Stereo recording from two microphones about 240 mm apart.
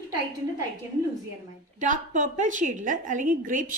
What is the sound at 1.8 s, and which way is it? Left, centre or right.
A woman's voice, right.